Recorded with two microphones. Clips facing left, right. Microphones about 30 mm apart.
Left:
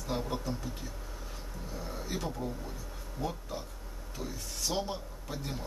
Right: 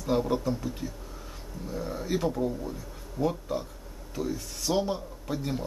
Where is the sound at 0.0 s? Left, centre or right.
Centre.